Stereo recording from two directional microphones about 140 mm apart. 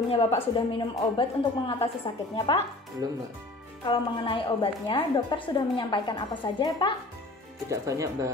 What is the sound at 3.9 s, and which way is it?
A woman's voice, 40° left (ahead or behind).